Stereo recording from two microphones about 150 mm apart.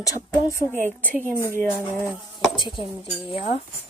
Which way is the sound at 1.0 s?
15° right (ahead or behind).